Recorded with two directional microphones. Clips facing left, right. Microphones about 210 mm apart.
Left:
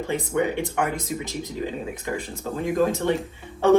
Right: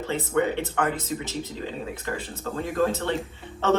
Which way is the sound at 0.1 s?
15° left (ahead or behind).